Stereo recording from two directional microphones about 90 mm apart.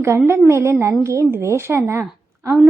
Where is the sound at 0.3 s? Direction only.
30° right (ahead or behind).